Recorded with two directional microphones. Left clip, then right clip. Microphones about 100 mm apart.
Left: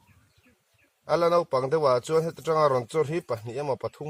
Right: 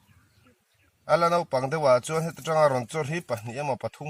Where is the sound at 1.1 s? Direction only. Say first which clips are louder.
Even; 20° left (ahead or behind).